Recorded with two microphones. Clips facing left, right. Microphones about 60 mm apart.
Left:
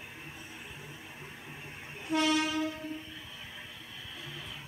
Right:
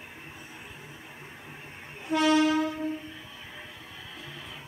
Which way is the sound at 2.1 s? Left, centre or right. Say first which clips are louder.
Right 6 dB; right.